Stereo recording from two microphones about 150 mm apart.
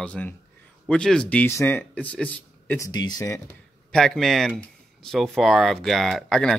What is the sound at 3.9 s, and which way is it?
Speech, 5° left (ahead or behind).